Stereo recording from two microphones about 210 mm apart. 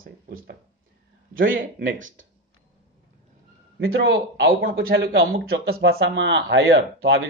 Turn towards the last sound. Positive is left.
turn(degrees=-55)  # may be behind; listen again after turning